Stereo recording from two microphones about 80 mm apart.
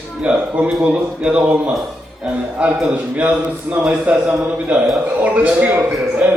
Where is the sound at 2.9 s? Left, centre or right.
Centre.